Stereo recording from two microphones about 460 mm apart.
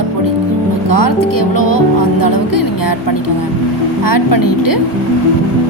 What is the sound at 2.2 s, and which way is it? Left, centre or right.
Music, left.